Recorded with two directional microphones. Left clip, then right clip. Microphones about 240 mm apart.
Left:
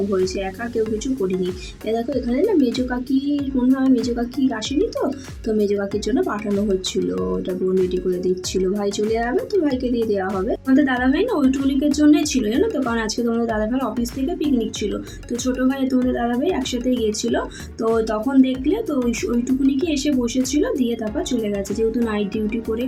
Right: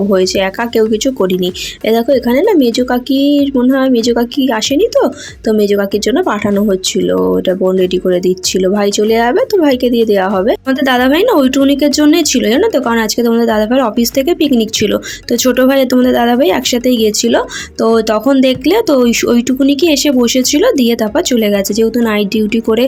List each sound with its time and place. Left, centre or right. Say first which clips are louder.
1.9 s speech: right 12 dB; right
8.7 s speech: right 10 dB; right
15.3 s speech: right 13 dB; right